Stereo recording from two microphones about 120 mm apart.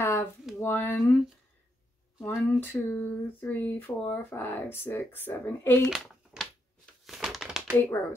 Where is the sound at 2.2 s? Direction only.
15° left (ahead or behind).